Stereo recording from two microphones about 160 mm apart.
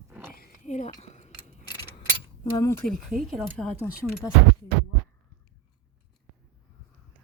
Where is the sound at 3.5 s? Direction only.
5° left (ahead or behind).